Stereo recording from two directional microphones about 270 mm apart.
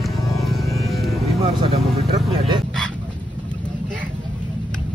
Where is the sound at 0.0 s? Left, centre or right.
Centre.